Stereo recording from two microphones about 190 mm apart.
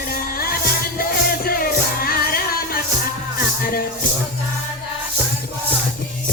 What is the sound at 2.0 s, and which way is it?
Music, 50° left (ahead or behind).